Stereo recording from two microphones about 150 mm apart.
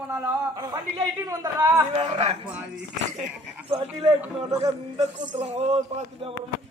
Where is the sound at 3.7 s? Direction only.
35° right (ahead or behind).